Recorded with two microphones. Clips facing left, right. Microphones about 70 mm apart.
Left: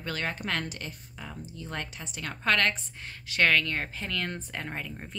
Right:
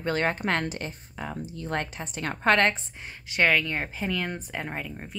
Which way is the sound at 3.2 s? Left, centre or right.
Centre.